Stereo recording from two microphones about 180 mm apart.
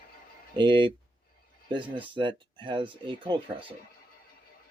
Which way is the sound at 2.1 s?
25° right (ahead or behind).